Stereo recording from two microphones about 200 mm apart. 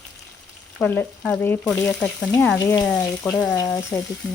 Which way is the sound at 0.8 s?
10° left (ahead or behind).